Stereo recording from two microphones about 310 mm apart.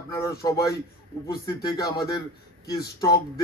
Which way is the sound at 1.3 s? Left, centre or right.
Centre.